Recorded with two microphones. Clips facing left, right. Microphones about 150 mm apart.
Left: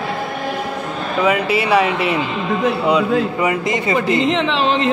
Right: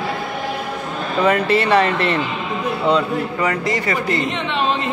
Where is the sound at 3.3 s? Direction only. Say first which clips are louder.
Left 2 dB; 20° left (ahead or behind).